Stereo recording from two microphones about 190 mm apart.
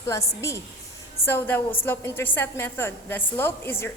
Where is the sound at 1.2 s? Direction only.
10° left (ahead or behind).